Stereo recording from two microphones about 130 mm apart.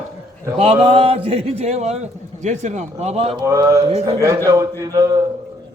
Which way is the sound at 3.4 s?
25° right (ahead or behind).